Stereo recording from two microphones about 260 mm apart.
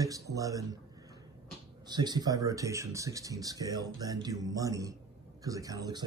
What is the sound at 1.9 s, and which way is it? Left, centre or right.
Speech, centre.